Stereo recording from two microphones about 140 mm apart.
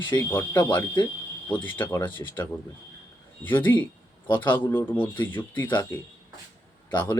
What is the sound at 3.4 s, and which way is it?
Speech, 15° left (ahead or behind).